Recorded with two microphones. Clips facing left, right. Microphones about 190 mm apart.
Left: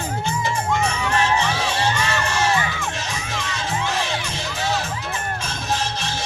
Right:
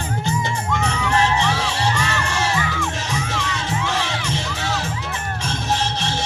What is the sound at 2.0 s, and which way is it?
Crowd, 20° left (ahead or behind).